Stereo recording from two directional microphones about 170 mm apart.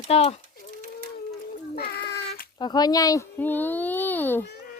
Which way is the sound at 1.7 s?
65° left (ahead or behind).